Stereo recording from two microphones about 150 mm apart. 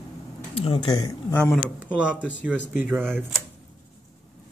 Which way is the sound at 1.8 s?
10° right (ahead or behind).